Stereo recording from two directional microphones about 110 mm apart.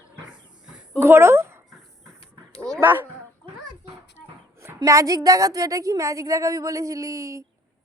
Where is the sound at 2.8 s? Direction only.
20° right (ahead or behind).